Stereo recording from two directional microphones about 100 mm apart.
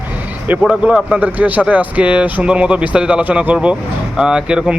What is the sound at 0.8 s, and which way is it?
Speech, 10° right (ahead or behind).